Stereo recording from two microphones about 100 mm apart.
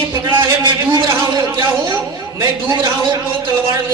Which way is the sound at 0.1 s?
50° right (ahead or behind).